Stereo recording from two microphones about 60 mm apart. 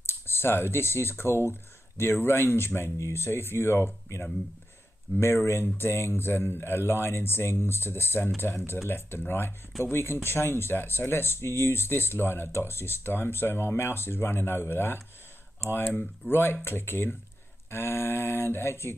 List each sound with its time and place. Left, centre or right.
0.0 s speech: left